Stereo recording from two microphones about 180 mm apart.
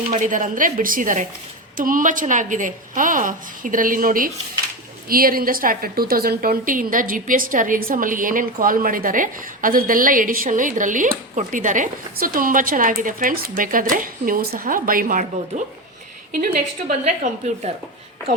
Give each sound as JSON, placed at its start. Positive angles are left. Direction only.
{"t": 0.1, "sound": "a woman's voice", "side_deg": -45}
{"t": 17.0, "sound": "a woman's voice", "side_deg": -40}